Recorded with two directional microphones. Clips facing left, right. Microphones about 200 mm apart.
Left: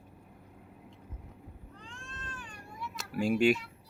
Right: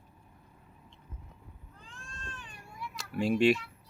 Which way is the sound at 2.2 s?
25° right (ahead or behind).